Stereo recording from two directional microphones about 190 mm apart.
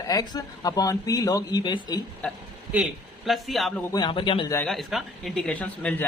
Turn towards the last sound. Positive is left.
turn(degrees=5)  # may be behind; listen again after turning